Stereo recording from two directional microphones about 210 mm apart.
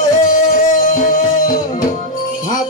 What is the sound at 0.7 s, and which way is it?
Music, 40° left (ahead or behind).